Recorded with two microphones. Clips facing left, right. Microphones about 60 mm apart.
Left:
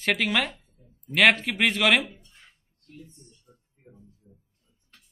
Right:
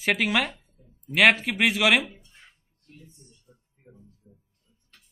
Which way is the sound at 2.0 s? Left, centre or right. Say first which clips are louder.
Right 1 dB; centre.